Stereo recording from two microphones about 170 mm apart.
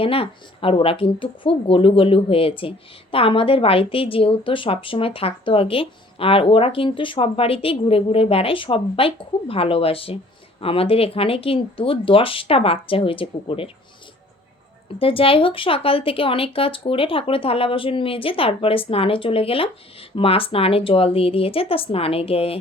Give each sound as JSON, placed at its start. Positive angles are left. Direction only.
{"t": 0.0, "sound": "speech", "side_deg": 35}
{"t": 14.9, "sound": "speech", "side_deg": 35}